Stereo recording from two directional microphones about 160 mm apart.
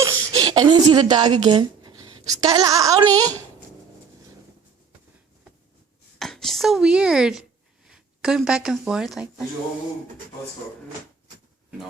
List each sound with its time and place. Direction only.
0.0 s speech: 25° right (ahead or behind)
6.1 s speech: centre (ahead or behind)